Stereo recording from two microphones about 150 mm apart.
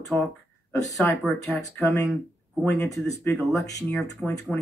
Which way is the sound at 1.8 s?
20° left (ahead or behind).